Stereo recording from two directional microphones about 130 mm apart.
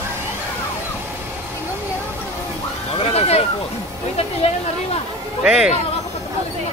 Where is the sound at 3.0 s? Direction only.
50° left (ahead or behind).